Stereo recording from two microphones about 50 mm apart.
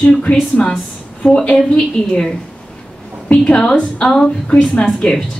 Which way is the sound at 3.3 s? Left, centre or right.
Centre.